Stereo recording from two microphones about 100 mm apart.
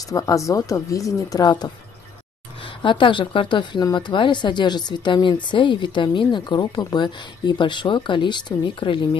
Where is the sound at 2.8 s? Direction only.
55° left (ahead or behind).